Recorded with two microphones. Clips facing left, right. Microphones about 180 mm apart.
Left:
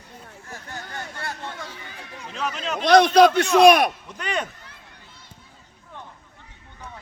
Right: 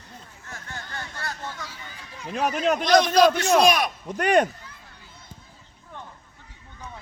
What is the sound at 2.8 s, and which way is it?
A man's voice, 60° left (ahead or behind).